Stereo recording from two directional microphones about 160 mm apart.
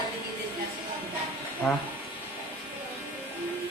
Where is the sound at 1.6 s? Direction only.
Centre (ahead or behind).